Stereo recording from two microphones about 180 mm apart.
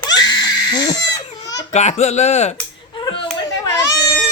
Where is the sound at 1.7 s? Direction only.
40° left (ahead or behind).